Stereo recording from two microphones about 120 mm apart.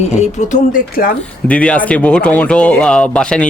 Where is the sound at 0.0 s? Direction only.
70° left (ahead or behind); by 0.8 s 90° left.